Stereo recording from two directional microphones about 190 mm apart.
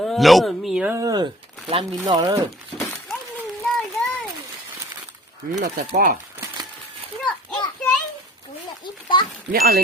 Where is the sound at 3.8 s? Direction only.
Centre (ahead or behind).